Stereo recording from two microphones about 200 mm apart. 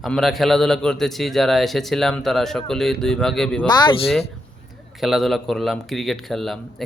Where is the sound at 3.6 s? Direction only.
20° left (ahead or behind).